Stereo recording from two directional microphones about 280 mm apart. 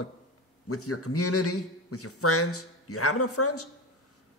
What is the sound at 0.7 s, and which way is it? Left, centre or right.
A man's voice, left.